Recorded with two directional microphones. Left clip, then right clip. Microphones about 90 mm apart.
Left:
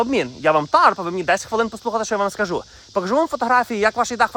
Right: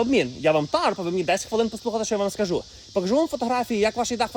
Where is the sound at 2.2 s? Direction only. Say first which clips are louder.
Left 4 dB; 30° left (ahead or behind).